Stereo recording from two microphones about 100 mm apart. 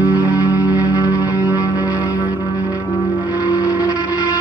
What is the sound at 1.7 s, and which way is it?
Ship, 15° right (ahead or behind).